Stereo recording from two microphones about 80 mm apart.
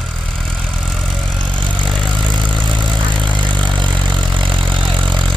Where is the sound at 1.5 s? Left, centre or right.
Right.